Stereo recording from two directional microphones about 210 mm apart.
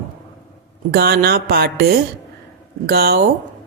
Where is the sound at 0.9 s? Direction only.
50° right (ahead or behind).